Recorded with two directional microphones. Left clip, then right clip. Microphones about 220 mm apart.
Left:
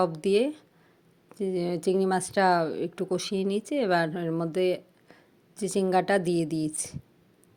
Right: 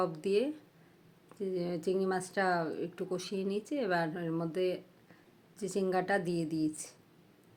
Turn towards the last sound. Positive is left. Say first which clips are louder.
# left 4 dB
turn(degrees=35)  # may be behind; listen again after turning